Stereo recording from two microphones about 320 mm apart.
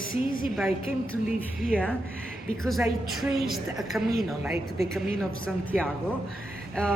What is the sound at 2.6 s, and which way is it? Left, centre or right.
A woman's voice, centre.